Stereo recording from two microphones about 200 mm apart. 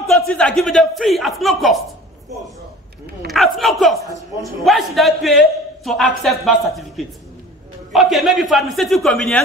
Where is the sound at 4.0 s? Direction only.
15° left (ahead or behind).